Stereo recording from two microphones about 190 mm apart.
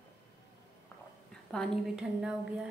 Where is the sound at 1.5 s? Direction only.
Centre (ahead or behind).